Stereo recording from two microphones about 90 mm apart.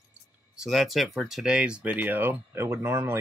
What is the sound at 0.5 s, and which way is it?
Speech, 5° right (ahead or behind).